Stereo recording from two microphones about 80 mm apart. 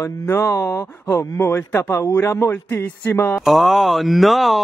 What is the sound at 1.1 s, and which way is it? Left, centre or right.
Speech, left.